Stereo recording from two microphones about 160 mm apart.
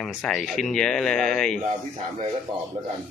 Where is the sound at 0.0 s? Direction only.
Centre (ahead or behind).